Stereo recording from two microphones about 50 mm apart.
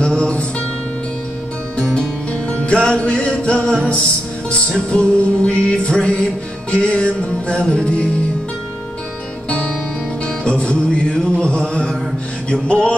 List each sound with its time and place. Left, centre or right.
0.0 s music: centre
2.5 s music: left
9.5 s music: left